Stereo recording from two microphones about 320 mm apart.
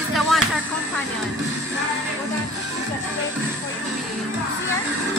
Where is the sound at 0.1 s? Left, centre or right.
Centre.